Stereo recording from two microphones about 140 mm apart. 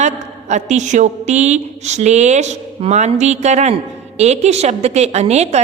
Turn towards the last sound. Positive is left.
turn(degrees=-50)  # may be behind; listen again after turning